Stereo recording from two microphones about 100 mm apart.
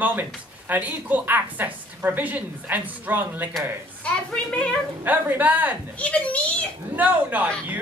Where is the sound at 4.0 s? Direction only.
10° left (ahead or behind).